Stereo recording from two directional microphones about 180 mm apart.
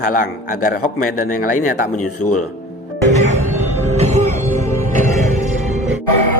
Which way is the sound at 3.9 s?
40° right (ahead or behind).